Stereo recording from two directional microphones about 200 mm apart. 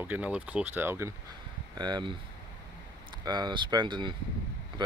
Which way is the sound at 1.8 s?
20° right (ahead or behind).